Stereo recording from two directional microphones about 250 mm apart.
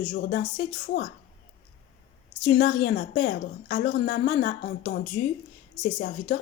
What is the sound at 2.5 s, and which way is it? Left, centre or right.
A woman's voice, left.